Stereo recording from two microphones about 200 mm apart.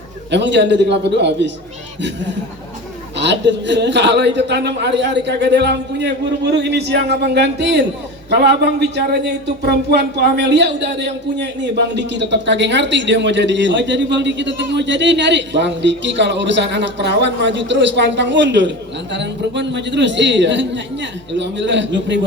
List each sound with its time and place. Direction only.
0.3 s speech: 60° right (ahead or behind)
3.2 s speech: 60° right (ahead or behind)